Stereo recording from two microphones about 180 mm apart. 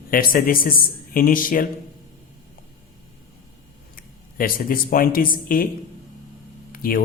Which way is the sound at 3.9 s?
50° left (ahead or behind).